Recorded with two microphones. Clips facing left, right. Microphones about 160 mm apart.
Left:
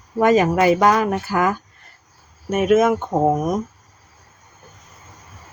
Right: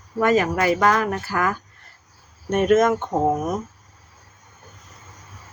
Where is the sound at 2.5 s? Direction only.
5° left (ahead or behind).